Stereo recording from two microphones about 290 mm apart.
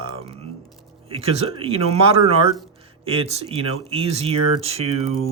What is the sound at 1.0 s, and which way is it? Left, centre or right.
Speech, centre.